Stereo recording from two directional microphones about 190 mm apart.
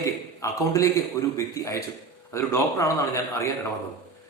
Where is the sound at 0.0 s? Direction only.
15° left (ahead or behind).